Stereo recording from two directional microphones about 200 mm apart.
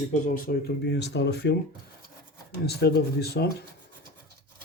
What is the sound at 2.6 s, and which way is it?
Speech, 55° left (ahead or behind).